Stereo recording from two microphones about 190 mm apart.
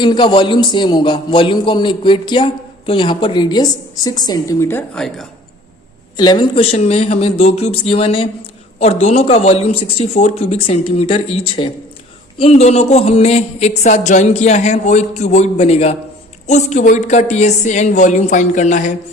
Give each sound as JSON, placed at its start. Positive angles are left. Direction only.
{"t": 0.0, "sound": "a man's voice", "side_deg": 25}
{"t": 4.9, "sound": "a woman's voice", "side_deg": 0}
{"t": 6.1, "sound": "a man's voice", "side_deg": 25}